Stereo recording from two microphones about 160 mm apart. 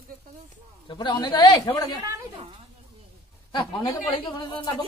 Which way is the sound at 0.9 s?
30° left (ahead or behind).